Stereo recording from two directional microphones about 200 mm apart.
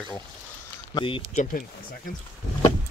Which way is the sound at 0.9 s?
25° left (ahead or behind).